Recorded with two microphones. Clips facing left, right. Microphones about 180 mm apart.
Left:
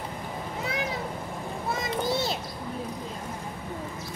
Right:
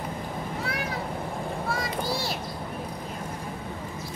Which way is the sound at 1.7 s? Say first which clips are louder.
Left 3 dB; 20° left (ahead or behind).